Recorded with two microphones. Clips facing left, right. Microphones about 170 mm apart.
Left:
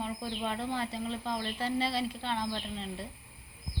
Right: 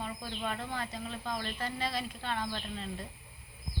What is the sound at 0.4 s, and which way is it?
Speech, 20° left (ahead or behind).